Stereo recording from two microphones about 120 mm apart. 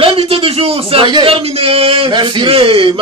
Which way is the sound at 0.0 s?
50° right (ahead or behind).